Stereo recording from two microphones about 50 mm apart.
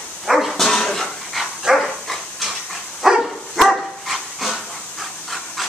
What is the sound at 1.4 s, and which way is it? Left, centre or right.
Dog, centre.